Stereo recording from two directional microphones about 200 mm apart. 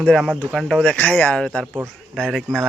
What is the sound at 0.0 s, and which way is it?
Speech, centre (ahead or behind).